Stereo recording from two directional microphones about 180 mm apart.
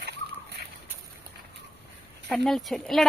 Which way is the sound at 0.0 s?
65° right (ahead or behind).